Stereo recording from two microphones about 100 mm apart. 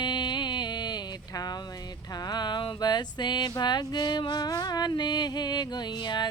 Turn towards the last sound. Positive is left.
turn(degrees=45)  # may be behind; listen again after turning